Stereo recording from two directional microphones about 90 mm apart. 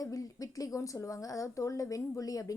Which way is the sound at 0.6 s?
35° left (ahead or behind).